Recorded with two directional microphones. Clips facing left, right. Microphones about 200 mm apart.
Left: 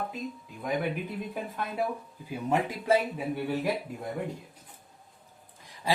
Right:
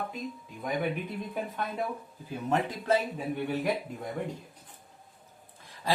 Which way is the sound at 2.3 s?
10° left (ahead or behind).